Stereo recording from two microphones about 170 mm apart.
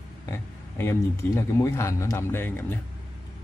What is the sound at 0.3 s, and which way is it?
A man's voice, 15° left (ahead or behind).